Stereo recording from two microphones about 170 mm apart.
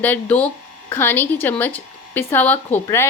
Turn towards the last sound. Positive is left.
turn(degrees=15)  # may be behind; listen again after turning